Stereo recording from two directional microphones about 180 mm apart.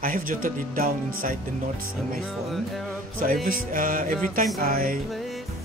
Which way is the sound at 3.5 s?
50° right (ahead or behind).